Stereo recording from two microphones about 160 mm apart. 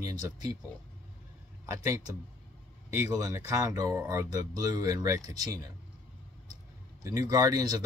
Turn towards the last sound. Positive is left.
turn(degrees=-20)  # may be behind; listen again after turning